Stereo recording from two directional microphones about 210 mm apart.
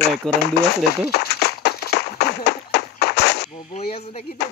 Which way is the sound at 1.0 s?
50° left (ahead or behind).